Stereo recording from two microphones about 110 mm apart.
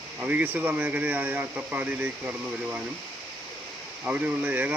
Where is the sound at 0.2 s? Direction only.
15° right (ahead or behind).